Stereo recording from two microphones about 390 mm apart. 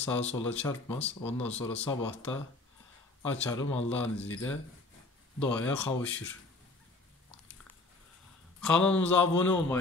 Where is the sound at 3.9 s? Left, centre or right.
Left.